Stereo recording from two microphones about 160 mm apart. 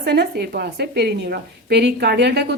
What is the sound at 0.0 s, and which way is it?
Speech, 90° right.